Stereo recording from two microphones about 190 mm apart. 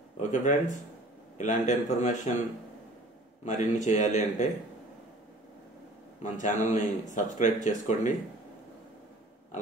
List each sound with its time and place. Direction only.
0.2 s speech: 40° left (ahead or behind)
3.4 s speech: 40° left (ahead or behind)
6.2 s speech: 40° left (ahead or behind)